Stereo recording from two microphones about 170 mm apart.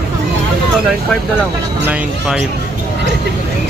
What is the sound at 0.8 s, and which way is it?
Speech, 5° right (ahead or behind).